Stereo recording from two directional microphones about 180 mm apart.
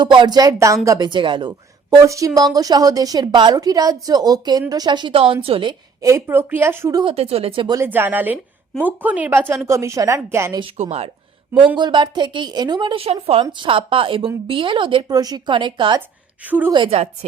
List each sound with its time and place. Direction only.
0.0 s a woman's voice: 25° right (ahead or behind)
6.0 s speech: 15° right (ahead or behind)
7.0 s speech: 30° right (ahead or behind)
7.8 s speech: 10° right (ahead or behind)
10.6 s speech: 30° right (ahead or behind)
11.8 s a woman's voice: 25° right (ahead or behind)
16.0 s a woman's voice: 10° right (ahead or behind)
16.7 s speech: 30° right (ahead or behind)